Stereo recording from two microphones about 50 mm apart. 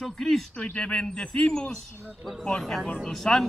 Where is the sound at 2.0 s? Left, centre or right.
Right.